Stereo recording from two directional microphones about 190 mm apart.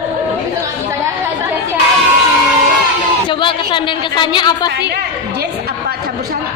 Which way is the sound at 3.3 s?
25° left (ahead or behind).